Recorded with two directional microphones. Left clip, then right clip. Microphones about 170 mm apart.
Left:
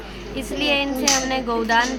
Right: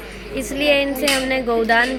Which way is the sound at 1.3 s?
15° right (ahead or behind).